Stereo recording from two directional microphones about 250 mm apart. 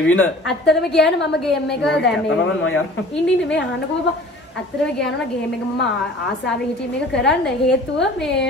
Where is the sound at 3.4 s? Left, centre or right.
Left.